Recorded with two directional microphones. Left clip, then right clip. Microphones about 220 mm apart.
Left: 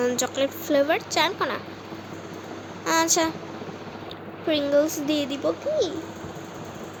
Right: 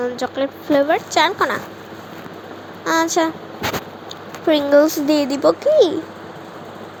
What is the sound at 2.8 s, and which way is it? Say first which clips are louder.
Speech: right 5 dB; centre (ahead or behind).